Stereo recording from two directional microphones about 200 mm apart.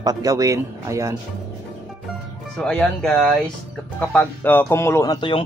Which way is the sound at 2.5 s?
5° left (ahead or behind).